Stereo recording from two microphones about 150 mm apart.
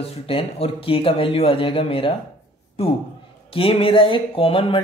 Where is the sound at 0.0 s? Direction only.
40° left (ahead or behind).